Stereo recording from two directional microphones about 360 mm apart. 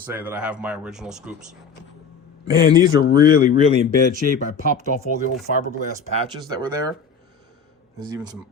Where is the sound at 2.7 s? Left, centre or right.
Centre.